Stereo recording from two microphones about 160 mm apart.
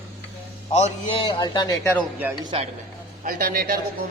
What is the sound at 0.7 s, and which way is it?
Speech, 45° left (ahead or behind).